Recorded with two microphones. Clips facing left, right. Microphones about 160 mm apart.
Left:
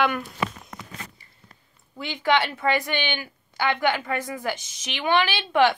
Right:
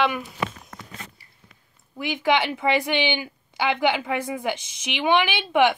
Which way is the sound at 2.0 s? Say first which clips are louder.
Right 1 dB; 15° right (ahead or behind).